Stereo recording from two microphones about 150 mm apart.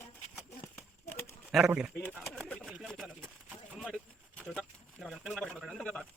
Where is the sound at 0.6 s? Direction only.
15° left (ahead or behind).